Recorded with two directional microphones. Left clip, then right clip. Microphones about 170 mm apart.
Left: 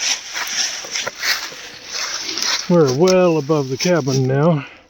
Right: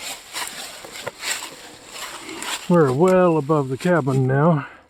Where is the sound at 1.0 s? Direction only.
10° left (ahead or behind).